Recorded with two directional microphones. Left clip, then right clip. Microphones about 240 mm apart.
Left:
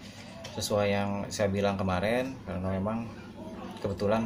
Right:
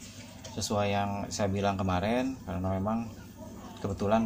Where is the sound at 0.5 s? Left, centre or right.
Right.